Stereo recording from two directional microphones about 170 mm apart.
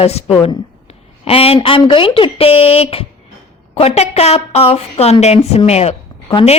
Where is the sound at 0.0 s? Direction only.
35° left (ahead or behind).